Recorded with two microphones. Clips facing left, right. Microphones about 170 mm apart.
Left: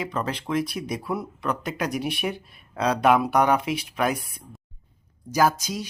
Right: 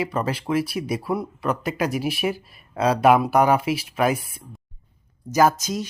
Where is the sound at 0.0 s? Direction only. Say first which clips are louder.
Right 4 dB; 10° right (ahead or behind).